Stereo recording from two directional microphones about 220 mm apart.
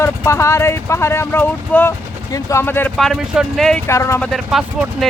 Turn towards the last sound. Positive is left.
turn(degrees=0)  # may be behind; listen again after turning